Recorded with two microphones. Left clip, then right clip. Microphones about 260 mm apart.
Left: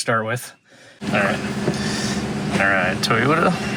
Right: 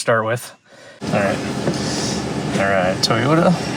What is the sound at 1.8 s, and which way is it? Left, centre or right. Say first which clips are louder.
Vehicle: right 2 dB; right.